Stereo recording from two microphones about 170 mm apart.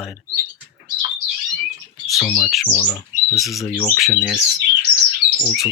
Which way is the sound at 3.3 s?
Centre (ahead or behind).